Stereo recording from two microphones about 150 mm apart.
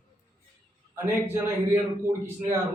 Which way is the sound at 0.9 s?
15° right (ahead or behind).